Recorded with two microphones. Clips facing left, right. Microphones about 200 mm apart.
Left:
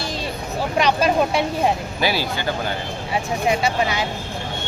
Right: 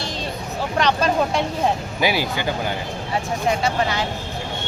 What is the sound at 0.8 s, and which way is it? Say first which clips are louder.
Speech: left 1 dB; 10° left (ahead or behind).